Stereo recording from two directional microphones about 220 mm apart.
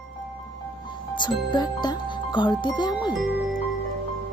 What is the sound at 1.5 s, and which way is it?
Speech, 20° left (ahead or behind).